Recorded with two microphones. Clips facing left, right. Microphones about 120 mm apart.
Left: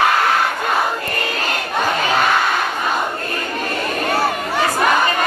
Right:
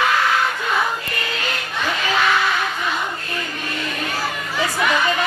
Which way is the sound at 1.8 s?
50° left (ahead or behind).